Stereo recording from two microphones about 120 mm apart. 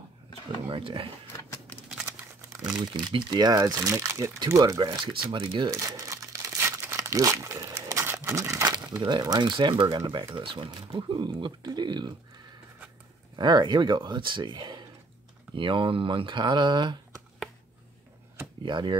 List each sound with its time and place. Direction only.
0.7 s speech: 45° right (ahead or behind)
1.5 s typewriter: 15° left (ahead or behind)
3.0 s speech: 40° right (ahead or behind)
5.7 s speech: 30° right (ahead or behind)
6.9 s crumpling: 25° right (ahead or behind)
8.2 s a sound: 25° right (ahead or behind)
8.9 s speech: 35° right (ahead or behind)
13.4 s speech: 40° right (ahead or behind)
18.6 s speech: 40° right (ahead or behind)